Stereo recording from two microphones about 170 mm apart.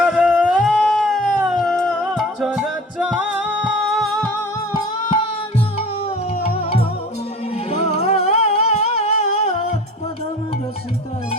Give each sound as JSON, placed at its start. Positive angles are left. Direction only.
{"t": 0.0, "sound": "howl", "side_deg": -5}
{"t": 6.6, "sound": "music", "side_deg": 35}